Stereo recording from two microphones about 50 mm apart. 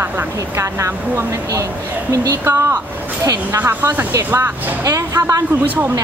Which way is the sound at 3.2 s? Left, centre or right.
Right.